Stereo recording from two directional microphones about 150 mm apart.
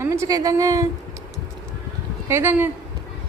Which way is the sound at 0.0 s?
20° right (ahead or behind).